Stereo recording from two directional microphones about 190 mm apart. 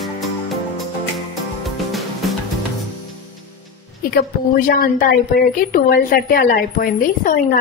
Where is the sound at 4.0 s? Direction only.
55° left (ahead or behind).